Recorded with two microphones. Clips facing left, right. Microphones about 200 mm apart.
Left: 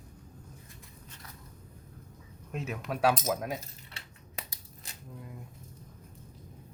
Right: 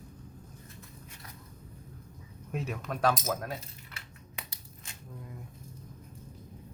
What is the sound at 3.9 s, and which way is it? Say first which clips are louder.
Crushing: right 1 dB; 35° left (ahead or behind).